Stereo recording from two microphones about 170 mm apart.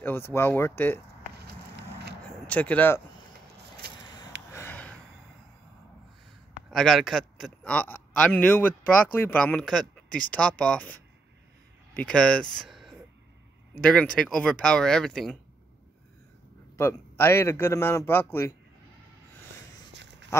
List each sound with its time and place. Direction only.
0.0 s a man's voice: 15° left (ahead or behind)
2.4 s a man's voice: 10° left (ahead or behind)
4.0 s a sound: 25° left (ahead or behind)
4.5 s a sound: 15° left (ahead or behind)
6.7 s a man's voice: centre (ahead or behind)
10.0 s speech: 55° left (ahead or behind)
10.6 s a man's voice: 5° left (ahead or behind)
14.1 s speech: 5° left (ahead or behind)
16.7 s a man's voice: 15° left (ahead or behind)
19.9 s a sound: 90° right